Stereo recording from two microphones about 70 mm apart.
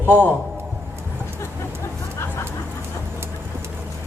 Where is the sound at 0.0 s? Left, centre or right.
Right.